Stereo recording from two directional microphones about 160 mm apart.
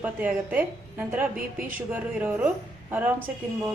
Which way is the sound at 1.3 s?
60° right (ahead or behind).